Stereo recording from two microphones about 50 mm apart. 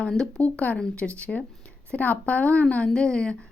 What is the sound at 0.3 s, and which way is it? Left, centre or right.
A woman's voice, left.